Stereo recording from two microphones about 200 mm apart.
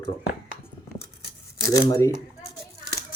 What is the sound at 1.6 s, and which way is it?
Speech, 15° left (ahead or behind).